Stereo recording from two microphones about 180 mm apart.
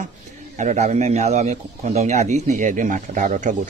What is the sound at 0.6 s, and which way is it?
A man's voice, 45° right (ahead or behind).